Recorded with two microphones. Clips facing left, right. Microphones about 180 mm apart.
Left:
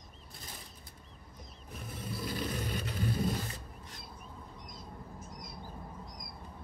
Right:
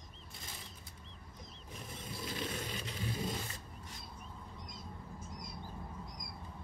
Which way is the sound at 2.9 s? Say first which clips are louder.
Left 7 dB; 50° left (ahead or behind).